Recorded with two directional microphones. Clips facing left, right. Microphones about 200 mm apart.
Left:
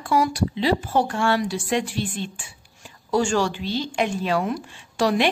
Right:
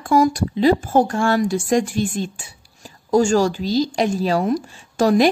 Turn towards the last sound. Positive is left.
turn(degrees=-40)  # may be behind; listen again after turning